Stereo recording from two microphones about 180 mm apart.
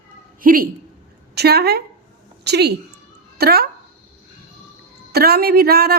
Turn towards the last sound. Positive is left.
turn(degrees=-60)  # may be behind; listen again after turning